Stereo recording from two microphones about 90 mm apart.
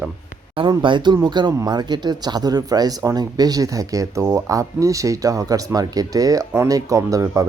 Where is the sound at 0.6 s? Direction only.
65° right (ahead or behind).